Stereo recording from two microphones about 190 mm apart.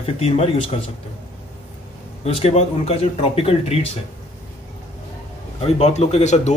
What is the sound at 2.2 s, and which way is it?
A man's voice, 35° left (ahead or behind).